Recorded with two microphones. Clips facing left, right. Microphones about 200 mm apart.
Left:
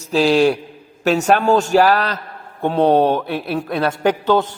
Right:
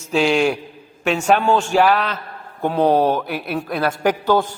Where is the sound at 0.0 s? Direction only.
35° left (ahead or behind).